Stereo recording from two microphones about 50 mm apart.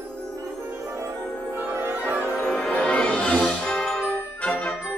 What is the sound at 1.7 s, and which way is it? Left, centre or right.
Music, right.